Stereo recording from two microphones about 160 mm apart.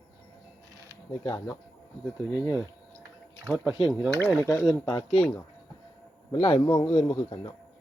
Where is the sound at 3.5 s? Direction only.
5° right (ahead or behind).